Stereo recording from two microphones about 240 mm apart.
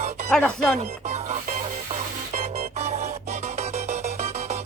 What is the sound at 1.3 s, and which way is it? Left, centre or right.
Music, right.